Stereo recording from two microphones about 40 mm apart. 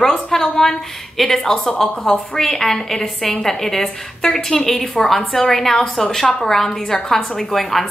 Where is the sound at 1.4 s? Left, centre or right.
Left.